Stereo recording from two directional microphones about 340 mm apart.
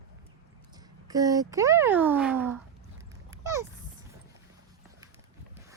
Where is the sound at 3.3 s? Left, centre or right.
Centre.